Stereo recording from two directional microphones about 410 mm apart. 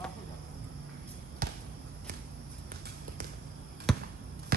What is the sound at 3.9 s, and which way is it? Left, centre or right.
Basketball bounce, centre.